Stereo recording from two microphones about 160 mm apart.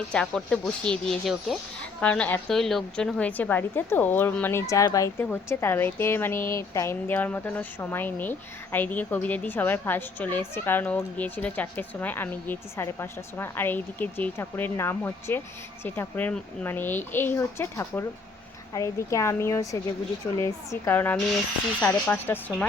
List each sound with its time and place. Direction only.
0.1 s a woman's voice: 5° left (ahead or behind)